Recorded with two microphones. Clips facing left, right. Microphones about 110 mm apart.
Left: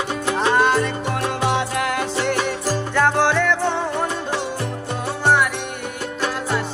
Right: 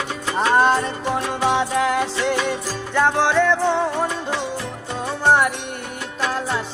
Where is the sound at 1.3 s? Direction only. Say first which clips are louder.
Right 2 dB; centre (ahead or behind).